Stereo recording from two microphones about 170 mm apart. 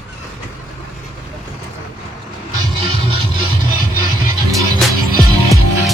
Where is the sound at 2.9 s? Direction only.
30° right (ahead or behind).